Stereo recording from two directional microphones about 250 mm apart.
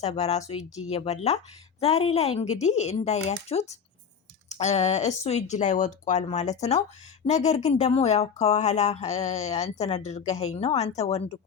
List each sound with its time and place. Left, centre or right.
0.0 s speech: left